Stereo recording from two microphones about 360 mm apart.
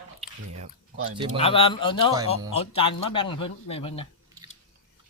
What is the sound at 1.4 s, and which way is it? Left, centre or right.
Speech, centre.